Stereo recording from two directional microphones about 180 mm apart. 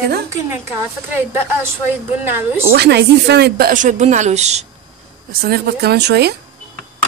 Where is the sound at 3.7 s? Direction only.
45° right (ahead or behind).